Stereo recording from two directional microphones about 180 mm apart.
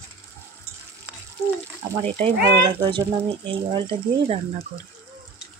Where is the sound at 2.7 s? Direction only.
25° right (ahead or behind).